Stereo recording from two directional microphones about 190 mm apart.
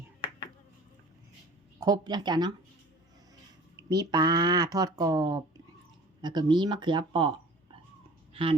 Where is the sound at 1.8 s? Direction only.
20° right (ahead or behind).